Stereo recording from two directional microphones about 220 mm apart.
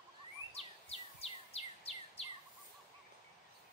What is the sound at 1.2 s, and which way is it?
Bird vocalization, 25° left (ahead or behind).